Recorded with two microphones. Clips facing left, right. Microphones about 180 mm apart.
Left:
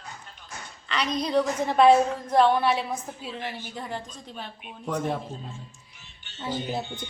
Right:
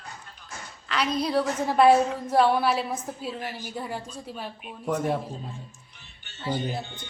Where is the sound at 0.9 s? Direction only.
5° right (ahead or behind).